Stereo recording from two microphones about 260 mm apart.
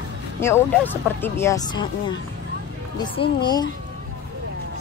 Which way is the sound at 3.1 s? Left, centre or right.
Centre.